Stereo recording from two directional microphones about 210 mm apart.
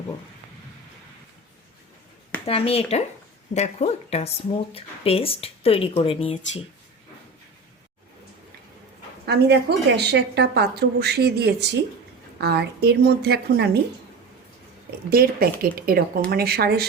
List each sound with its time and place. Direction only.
2.5 s speech: 25° left (ahead or behind)
9.2 s a woman's voice: 50° right (ahead or behind)
15.1 s a woman's voice: 45° right (ahead or behind)